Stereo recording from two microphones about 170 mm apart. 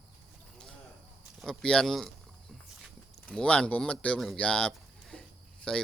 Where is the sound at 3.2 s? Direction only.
5° left (ahead or behind).